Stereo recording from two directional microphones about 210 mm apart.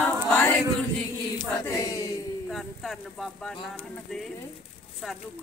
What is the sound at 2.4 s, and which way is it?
Speech, centre (ahead or behind).